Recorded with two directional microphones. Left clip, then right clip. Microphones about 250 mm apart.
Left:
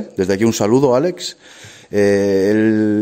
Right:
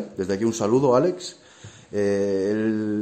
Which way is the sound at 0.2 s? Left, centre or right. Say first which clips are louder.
Left 8 dB; left.